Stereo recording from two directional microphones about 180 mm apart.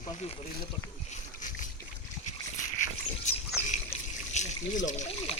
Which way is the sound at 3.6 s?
40° left (ahead or behind).